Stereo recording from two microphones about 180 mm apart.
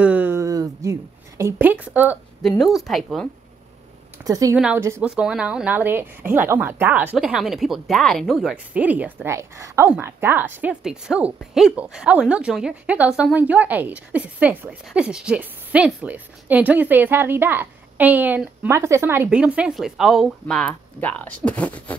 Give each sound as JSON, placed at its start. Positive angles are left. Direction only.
{"t": 0.0, "sound": "a sound", "side_deg": -10}
{"t": 1.4, "sound": "a woman's voice", "side_deg": -10}
{"t": 4.2, "sound": "a woman's voice", "side_deg": -20}
{"t": 21.5, "sound": "beatboxing", "side_deg": 10}